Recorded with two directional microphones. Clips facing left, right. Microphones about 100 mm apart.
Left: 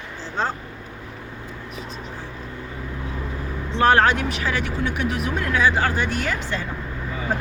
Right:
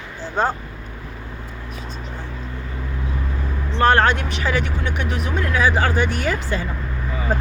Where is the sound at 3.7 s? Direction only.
5° left (ahead or behind).